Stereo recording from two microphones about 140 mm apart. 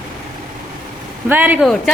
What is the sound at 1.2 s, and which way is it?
Speech, 10° right (ahead or behind).